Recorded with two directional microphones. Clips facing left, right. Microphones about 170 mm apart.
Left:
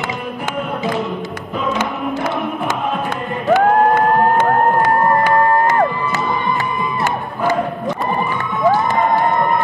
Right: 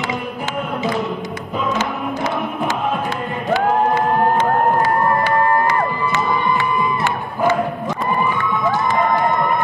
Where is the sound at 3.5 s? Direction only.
50° left (ahead or behind).